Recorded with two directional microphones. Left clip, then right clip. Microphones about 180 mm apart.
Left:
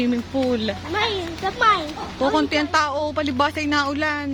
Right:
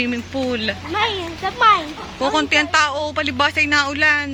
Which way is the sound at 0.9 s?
40° right (ahead or behind).